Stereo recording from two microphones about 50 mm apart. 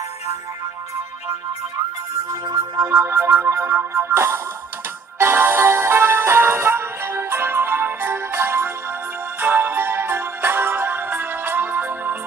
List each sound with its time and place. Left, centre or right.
2.9 s music: right
5.2 s music: right
9.4 s music: right